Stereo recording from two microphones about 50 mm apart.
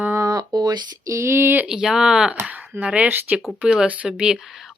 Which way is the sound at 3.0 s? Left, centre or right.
Right.